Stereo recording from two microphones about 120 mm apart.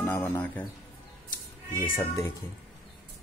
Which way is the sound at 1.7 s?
20° left (ahead or behind).